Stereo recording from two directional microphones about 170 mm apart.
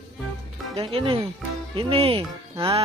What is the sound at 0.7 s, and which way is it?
Speech, 30° right (ahead or behind).